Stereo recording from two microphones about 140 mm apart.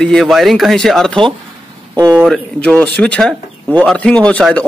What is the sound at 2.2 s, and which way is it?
A man's voice, 5° left (ahead or behind).